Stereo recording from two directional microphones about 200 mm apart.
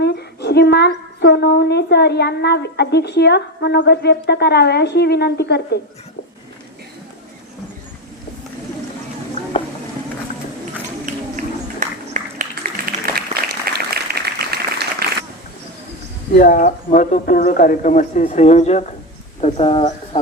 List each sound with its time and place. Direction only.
0.0 s speech: 55° left (ahead or behind)
11.0 s a sound: 40° right (ahead or behind)
16.3 s speech: 45° left (ahead or behind); by 19.9 s 30° left (ahead or behind)